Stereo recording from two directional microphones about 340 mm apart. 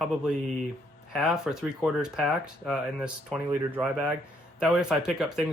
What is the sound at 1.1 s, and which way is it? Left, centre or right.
Speech, centre.